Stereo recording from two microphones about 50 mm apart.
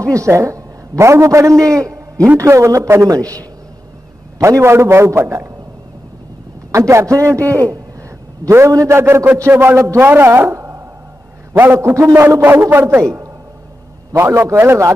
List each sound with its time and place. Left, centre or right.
0.0 s a man's voice: right
2.3 s a man's voice: right
4.4 s a man's voice: right
6.7 s a man's voice: right
8.5 s a man's voice: right
9.6 s speech: right
11.5 s a man's voice: right
11.8 s a man's voice: right
12.4 s speech: right
14.1 s a man's voice: right